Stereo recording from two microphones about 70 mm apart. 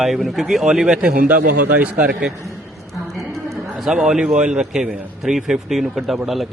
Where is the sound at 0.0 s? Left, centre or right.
Centre.